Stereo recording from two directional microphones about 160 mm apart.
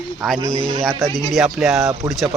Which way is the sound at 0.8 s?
Centre (ahead or behind).